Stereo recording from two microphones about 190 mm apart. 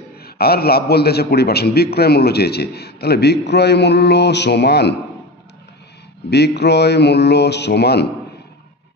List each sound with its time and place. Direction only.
0.2 s a man's voice: 55° left (ahead or behind)
6.3 s a man's voice: 60° left (ahead or behind)